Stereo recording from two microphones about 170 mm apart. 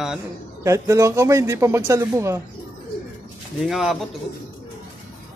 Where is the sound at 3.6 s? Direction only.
Centre (ahead or behind).